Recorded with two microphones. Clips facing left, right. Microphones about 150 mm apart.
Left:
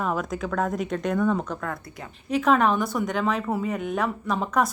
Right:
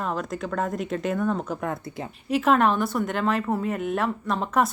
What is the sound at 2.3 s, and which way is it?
A woman's voice, 5° right (ahead or behind).